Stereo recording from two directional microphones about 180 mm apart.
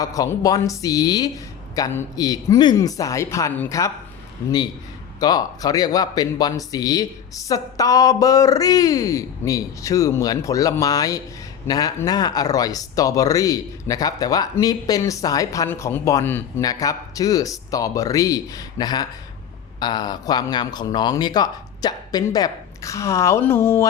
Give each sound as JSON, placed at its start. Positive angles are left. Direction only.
{"t": 0.0, "sound": "speech", "side_deg": 20}
{"t": 5.2, "sound": "speech", "side_deg": 20}